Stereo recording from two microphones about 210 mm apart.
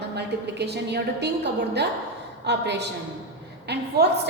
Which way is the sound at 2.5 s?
55° right (ahead or behind).